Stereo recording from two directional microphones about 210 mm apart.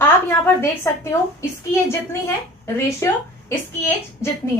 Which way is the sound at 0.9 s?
10° left (ahead or behind).